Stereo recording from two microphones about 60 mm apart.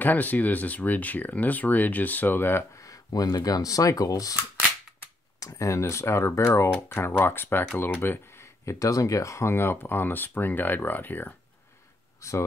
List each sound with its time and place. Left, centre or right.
0.0 s speech: left
2.7 s speech: left
5.4 s speech: left
6.9 s speech: left
12.2 s speech: left